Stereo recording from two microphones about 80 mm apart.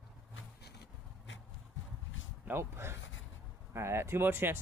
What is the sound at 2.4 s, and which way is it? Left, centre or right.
Speech, right.